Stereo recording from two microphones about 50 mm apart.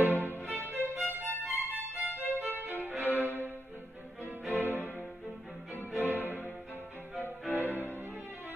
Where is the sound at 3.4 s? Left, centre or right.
Right.